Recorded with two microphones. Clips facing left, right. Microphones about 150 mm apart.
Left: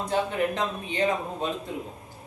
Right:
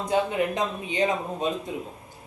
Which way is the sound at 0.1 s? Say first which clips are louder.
Right 2 dB; 15° right (ahead or behind).